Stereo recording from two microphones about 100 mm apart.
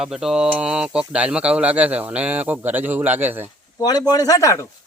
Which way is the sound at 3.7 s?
40° left (ahead or behind).